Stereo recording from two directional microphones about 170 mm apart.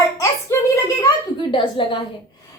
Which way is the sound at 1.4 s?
30° left (ahead or behind).